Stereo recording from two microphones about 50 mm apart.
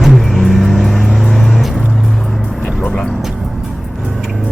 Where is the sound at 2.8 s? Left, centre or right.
Centre.